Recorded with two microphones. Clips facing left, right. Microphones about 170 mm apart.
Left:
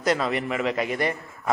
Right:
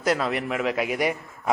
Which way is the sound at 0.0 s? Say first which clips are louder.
Even; 5° right (ahead or behind).